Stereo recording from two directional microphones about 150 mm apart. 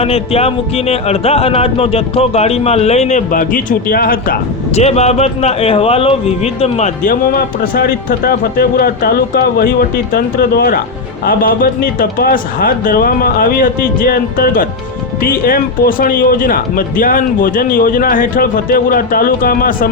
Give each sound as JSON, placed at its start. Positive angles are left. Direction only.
{"t": 0.0, "sound": "speech", "side_deg": 40}
{"t": 4.7, "sound": "speech", "side_deg": 45}
{"t": 7.0, "sound": "speech", "side_deg": 65}